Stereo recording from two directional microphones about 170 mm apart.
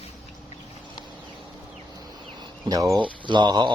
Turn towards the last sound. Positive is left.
turn(degrees=-25)  # may be behind; listen again after turning